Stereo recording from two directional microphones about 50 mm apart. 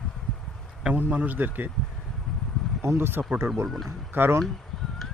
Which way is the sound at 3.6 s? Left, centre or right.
Centre.